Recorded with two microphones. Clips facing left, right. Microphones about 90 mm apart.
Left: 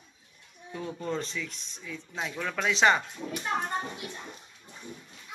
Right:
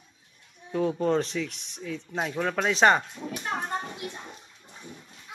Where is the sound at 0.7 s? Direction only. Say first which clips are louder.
Right 9 dB; 70° right (ahead or behind); by 2.3 s 55° right (ahead or behind).